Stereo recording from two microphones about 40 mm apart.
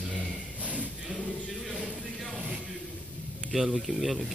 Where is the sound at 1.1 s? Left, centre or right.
Centre.